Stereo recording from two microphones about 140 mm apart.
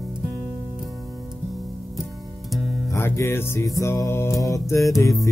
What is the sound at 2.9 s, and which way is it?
Music, 20° left (ahead or behind).